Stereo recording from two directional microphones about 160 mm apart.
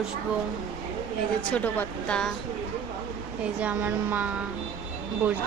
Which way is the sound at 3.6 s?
10° right (ahead or behind).